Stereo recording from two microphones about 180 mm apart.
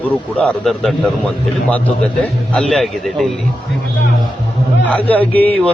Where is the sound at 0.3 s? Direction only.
5° left (ahead or behind).